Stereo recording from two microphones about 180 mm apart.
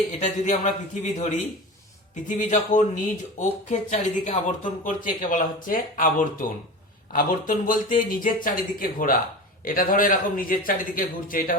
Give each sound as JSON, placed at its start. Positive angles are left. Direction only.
{"t": 0.2, "sound": "a man's voice", "side_deg": 45}